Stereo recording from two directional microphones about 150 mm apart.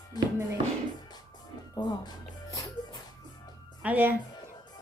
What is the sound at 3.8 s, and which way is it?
Speech, 10° right (ahead or behind).